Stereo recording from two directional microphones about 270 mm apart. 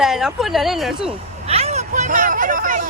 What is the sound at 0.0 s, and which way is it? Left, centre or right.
Speech, centre.